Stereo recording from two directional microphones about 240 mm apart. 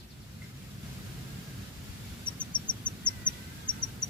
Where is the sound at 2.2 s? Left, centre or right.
Centre.